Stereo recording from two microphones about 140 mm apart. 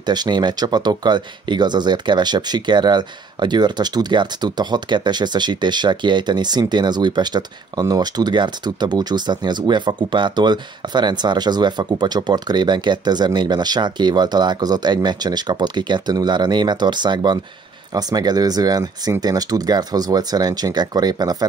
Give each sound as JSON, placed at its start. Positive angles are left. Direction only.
{"t": 0.0, "sound": "speech", "side_deg": -30}